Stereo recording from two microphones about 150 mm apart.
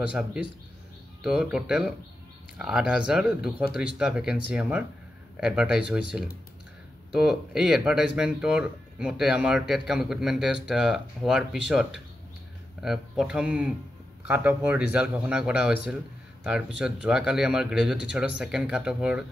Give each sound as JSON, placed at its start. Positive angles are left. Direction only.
{"t": 0.0, "sound": "speech", "side_deg": -5}